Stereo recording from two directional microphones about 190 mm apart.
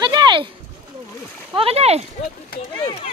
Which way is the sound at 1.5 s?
30° right (ahead or behind).